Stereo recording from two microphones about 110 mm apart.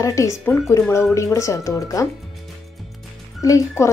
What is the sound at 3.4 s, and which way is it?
Speech, 30° left (ahead or behind).